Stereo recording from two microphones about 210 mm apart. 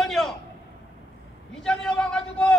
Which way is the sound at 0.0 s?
Centre (ahead or behind).